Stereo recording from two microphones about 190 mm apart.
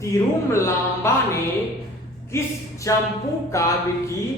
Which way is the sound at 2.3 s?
15° left (ahead or behind).